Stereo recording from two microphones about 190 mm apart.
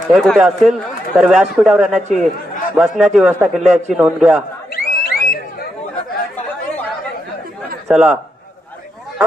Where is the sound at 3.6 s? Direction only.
35° right (ahead or behind).